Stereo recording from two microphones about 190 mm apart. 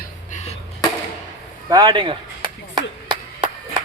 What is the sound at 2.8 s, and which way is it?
Clapping, 25° right (ahead or behind).